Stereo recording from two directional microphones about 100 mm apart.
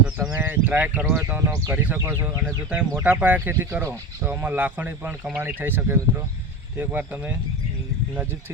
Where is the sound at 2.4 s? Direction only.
10° right (ahead or behind).